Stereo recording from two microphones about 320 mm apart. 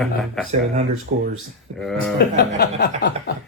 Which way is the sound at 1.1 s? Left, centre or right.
Right.